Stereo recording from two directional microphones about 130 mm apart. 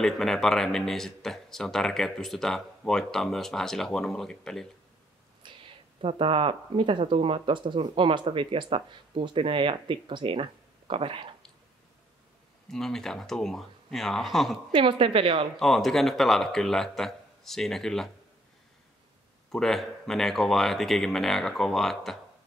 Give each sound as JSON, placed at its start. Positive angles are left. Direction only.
{"t": 0.0, "sound": "speech", "side_deg": 5}
{"t": 5.4, "sound": "a sound", "side_deg": -40}
{"t": 5.9, "sound": "speech", "side_deg": -45}
{"t": 12.6, "sound": "speech", "side_deg": 5}
{"t": 14.7, "sound": "a woman's voice", "side_deg": -40}
{"t": 15.6, "sound": "speech", "side_deg": 0}
{"t": 19.5, "sound": "speech", "side_deg": 0}